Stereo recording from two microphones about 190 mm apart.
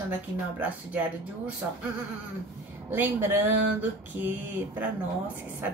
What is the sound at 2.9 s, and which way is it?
Speech, 10° right (ahead or behind).